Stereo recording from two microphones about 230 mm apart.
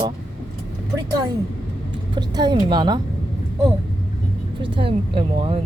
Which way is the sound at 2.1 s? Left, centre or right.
Centre.